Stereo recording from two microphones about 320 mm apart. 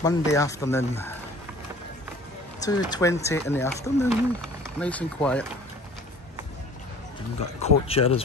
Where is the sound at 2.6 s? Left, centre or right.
Centre.